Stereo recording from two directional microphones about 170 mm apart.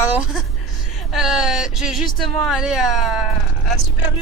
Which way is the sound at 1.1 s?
5° right (ahead or behind).